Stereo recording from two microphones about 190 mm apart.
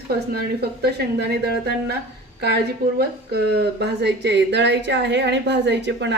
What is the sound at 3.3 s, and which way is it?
A woman's voice, 60° right (ahead or behind).